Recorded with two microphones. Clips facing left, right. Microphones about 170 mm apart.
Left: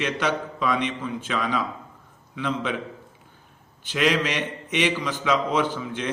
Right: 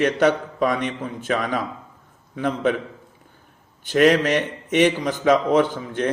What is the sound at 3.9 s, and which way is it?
A man's voice, 45° right (ahead or behind).